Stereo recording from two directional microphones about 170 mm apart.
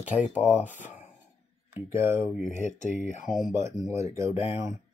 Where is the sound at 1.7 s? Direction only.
15° right (ahead or behind).